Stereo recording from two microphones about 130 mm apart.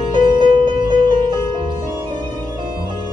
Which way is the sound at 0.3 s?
35° right (ahead or behind).